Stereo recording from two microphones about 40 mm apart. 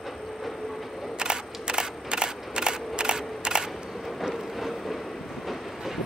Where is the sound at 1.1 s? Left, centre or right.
Centre.